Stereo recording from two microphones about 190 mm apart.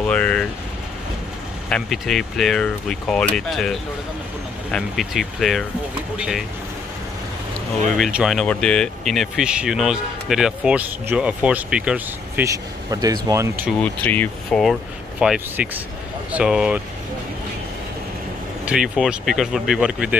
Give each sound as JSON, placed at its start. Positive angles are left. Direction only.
{"t": 0.0, "sound": "vehicle", "side_deg": 5}
{"t": 1.7, "sound": "speech", "side_deg": 0}
{"t": 8.0, "sound": "speech", "side_deg": 0}
{"t": 12.4, "sound": "speech", "side_deg": -20}
{"t": 13.7, "sound": "speech", "side_deg": 5}
{"t": 18.7, "sound": "speech", "side_deg": -5}